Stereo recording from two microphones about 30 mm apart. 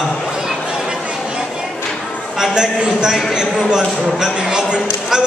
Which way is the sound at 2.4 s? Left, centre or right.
Right.